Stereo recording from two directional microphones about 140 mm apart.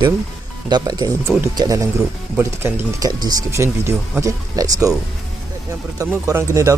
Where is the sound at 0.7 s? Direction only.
30° right (ahead or behind).